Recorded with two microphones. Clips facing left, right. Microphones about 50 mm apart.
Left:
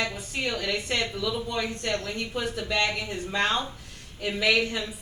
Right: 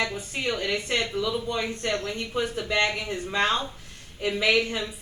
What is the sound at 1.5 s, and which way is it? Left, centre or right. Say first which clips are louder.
Speech: right 1 dB; right.